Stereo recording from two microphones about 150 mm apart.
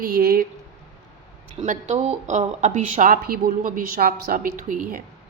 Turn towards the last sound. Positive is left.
turn(degrees=-60)  # may be behind; listen again after turning